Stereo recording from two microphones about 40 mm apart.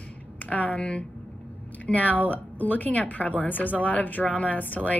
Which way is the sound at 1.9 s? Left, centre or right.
Left.